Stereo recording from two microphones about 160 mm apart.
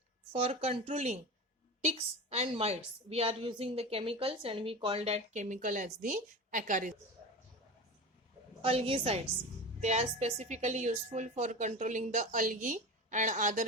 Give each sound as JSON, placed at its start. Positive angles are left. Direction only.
{"t": 0.3, "sound": "a woman's voice", "side_deg": -35}
{"t": 8.6, "sound": "a woman's voice", "side_deg": -35}